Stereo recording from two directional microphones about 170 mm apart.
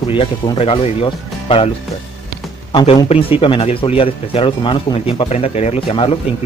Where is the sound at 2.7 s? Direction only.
30° left (ahead or behind).